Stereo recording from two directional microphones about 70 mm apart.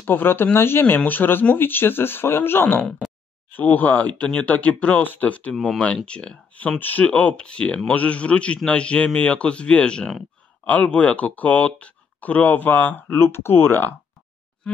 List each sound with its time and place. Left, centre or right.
0.0 s speech: left
5.5 s speech: centre; by 13.9 s left